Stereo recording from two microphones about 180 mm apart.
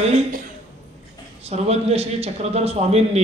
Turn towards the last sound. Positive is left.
turn(degrees=-35)  # may be behind; listen again after turning